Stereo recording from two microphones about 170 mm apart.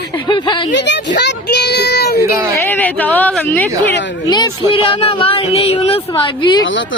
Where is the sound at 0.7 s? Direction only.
90° left; by 2.1 s 75° left (ahead or behind).